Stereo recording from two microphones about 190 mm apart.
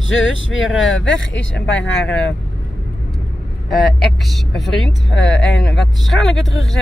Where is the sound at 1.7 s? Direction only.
5° left (ahead or behind).